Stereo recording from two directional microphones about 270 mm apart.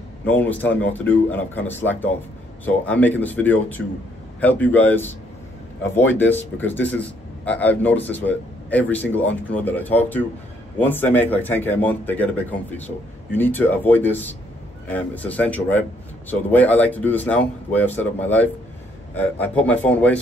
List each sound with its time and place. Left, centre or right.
0.3 s speech: centre